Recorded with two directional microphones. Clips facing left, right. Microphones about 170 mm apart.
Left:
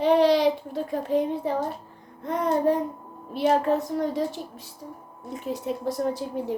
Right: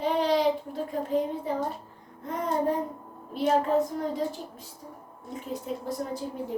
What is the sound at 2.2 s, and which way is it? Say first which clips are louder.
A woman's voice: left 5 dB; 75° left (ahead or behind).